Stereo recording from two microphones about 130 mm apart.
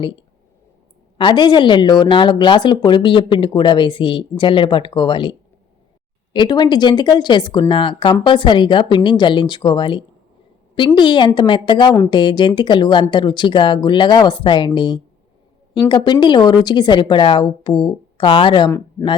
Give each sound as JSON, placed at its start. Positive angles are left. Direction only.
{"t": 0.0, "sound": "a woman's voice", "side_deg": 40}